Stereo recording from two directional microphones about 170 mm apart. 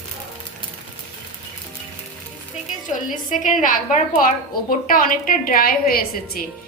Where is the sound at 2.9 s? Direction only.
50° left (ahead or behind).